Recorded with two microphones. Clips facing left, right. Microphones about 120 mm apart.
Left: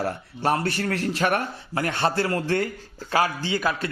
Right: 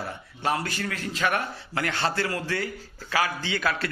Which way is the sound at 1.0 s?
60° left (ahead or behind).